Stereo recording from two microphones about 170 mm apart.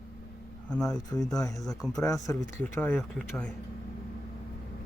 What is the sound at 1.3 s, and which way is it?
Speech, 20° left (ahead or behind).